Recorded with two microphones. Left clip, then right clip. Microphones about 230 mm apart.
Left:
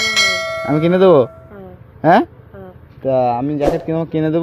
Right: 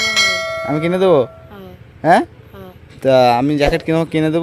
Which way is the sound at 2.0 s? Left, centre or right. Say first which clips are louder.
Even; centre.